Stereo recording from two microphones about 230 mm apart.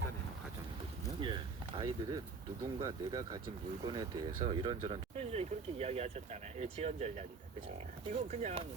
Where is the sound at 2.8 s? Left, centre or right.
Centre.